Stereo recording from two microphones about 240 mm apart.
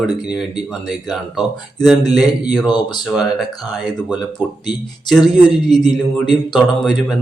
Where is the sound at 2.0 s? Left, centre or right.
Centre.